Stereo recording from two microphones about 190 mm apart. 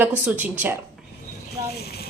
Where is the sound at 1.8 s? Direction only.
55° left (ahead or behind).